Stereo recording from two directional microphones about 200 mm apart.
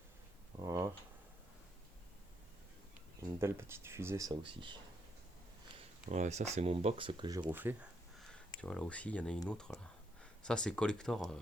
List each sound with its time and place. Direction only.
0.6 s a sound: 15° right (ahead or behind)
3.2 s speech: 15° right (ahead or behind)
5.7 s speech: 35° right (ahead or behind); by 7.4 s 20° right (ahead or behind)
7.5 s speech: 10° right (ahead or behind)
8.6 s speech: 5° left (ahead or behind)